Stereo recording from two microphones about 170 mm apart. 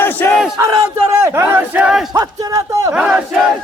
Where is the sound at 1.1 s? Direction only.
15° right (ahead or behind).